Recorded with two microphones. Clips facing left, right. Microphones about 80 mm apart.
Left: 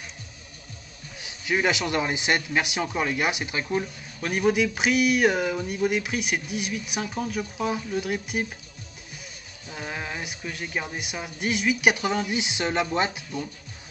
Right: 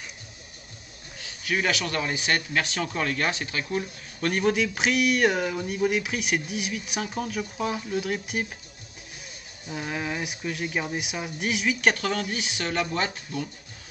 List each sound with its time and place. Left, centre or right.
1.2 s a man's voice: left
4.2 s speech: centre
9.7 s speech: centre
11.8 s a man's voice: centre